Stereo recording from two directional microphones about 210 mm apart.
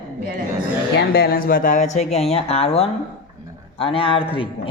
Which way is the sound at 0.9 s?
50° left (ahead or behind).